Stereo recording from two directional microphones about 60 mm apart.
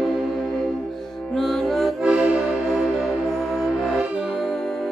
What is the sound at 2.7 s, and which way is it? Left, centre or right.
Music, centre.